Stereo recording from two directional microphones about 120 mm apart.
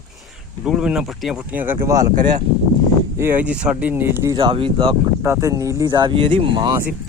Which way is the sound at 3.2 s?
15° right (ahead or behind).